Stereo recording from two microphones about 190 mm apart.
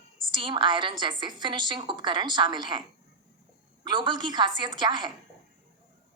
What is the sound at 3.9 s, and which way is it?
A woman's voice, 25° right (ahead or behind).